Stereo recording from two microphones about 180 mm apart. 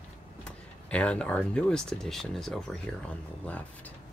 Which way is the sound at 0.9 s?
5° left (ahead or behind).